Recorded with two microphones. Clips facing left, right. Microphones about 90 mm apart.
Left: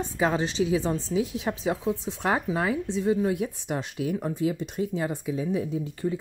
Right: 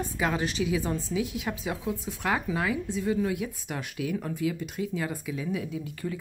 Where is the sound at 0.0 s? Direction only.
30° left (ahead or behind).